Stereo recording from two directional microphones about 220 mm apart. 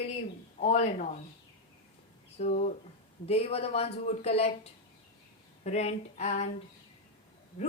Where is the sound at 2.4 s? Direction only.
30° left (ahead or behind).